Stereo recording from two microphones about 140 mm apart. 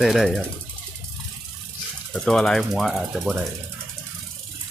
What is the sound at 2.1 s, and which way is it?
Speech, 5° left (ahead or behind).